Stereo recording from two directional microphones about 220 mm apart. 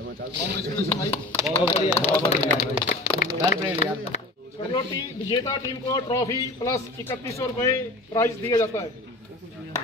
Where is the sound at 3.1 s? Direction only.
35° left (ahead or behind).